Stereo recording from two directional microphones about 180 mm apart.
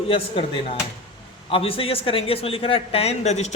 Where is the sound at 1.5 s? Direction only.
30° left (ahead or behind).